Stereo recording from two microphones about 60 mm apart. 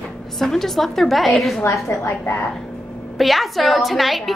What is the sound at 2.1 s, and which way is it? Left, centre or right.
Speech, left.